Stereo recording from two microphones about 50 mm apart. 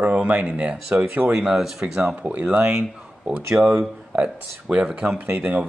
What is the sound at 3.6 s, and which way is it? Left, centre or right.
Speech, centre.